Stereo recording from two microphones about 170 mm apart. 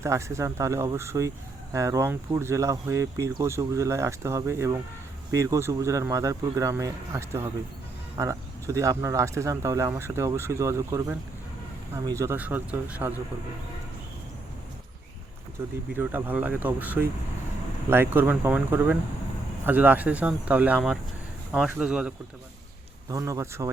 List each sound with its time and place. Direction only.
0.0 s speech: 15° right (ahead or behind)
16.0 s speech: 10° right (ahead or behind)
23.0 s speech: 20° right (ahead or behind)